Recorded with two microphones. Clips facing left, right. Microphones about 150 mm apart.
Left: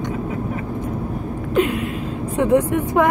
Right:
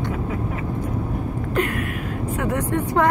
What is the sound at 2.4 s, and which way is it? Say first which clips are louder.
Speech: left 8 dB; 25° left (ahead or behind).